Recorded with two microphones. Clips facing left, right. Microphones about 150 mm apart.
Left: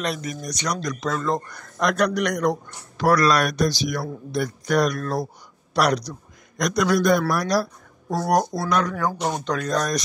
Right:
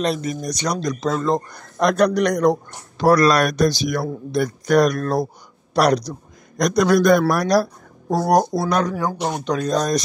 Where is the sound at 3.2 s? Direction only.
45° right (ahead or behind).